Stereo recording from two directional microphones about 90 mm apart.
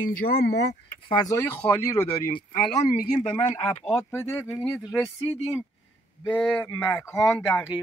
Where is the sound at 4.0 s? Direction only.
25° left (ahead or behind).